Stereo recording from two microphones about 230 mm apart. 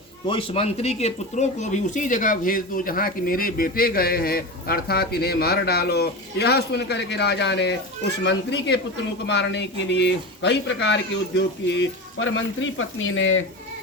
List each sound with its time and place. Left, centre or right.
0.3 s speech: left